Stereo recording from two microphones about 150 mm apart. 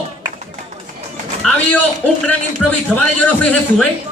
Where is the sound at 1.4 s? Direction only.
10° left (ahead or behind).